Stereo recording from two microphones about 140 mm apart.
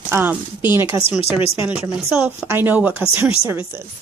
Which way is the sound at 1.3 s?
40° left (ahead or behind).